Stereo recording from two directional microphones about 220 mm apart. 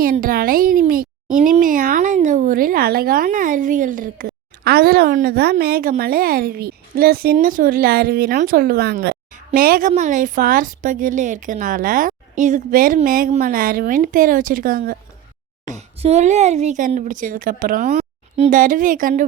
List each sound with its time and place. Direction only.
0.0 s speech: 40° right (ahead or behind)
15.6 s speech: 30° right (ahead or behind)